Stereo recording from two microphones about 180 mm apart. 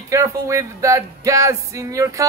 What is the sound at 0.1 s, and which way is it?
Music, 15° right (ahead or behind).